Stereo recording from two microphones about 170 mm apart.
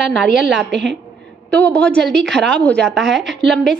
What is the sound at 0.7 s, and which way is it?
Speech, 90° right.